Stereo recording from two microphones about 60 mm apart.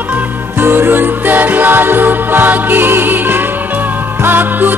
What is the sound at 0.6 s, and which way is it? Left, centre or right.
Music, right.